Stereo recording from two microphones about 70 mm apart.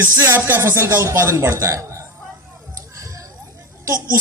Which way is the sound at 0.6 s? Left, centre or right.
Right.